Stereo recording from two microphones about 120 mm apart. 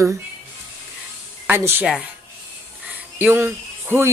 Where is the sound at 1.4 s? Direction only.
20° right (ahead or behind).